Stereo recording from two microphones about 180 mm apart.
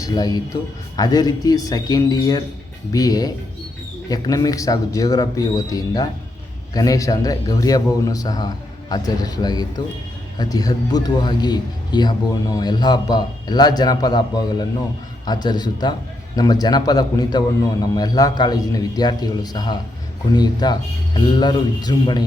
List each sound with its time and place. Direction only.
0.0 s speech: 20° left (ahead or behind)